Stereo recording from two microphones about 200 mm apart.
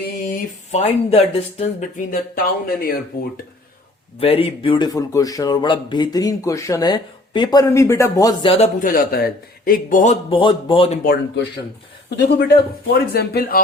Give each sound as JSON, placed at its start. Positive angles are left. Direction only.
{"t": 0.3, "sound": "speech", "side_deg": 35}
{"t": 4.2, "sound": "speech", "side_deg": 30}
{"t": 10.2, "sound": "speech", "side_deg": 25}
{"t": 11.0, "sound": "speech", "side_deg": 55}